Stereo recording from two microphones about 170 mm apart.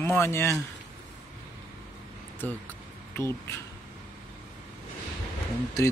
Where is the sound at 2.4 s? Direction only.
10° left (ahead or behind).